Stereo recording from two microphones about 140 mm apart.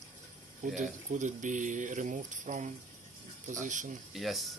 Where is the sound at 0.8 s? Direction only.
60° right (ahead or behind).